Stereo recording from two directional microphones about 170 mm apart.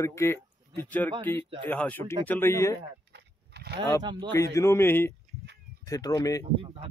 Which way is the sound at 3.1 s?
75° right (ahead or behind).